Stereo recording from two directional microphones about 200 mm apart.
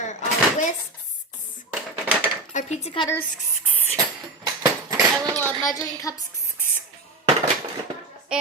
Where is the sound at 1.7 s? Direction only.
10° right (ahead or behind).